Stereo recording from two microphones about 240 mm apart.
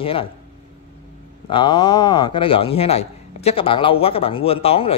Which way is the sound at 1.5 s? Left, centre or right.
Centre.